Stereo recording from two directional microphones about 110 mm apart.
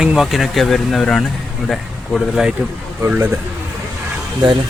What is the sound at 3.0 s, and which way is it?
Speech, 20° right (ahead or behind).